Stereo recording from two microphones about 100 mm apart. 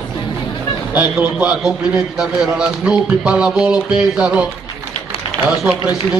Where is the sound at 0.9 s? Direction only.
15° right (ahead or behind).